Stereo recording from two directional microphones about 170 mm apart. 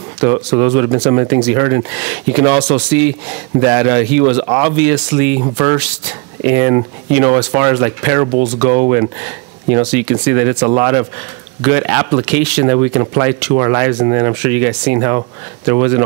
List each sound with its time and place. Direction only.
0.2 s speech: 10° right (ahead or behind)
5.4 s speech: 25° right (ahead or behind)
5.8 s speech: 10° right (ahead or behind)